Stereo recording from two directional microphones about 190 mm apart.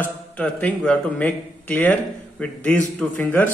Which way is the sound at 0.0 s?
5° left (ahead or behind).